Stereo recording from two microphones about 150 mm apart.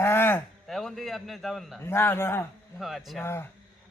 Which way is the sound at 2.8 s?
Centre (ahead or behind).